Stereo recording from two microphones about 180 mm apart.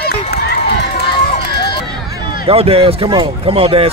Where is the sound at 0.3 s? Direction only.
65° left (ahead or behind).